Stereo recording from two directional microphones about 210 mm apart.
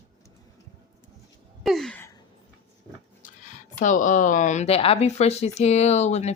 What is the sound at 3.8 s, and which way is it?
A woman's voice, 35° left (ahead or behind).